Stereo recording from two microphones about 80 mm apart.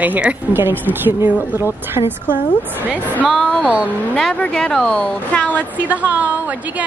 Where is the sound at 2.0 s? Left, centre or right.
Left.